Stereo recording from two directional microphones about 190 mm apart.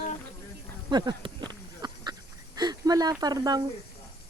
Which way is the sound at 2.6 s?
20° right (ahead or behind).